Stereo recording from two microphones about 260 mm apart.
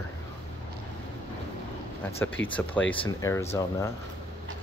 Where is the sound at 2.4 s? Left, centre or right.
Left.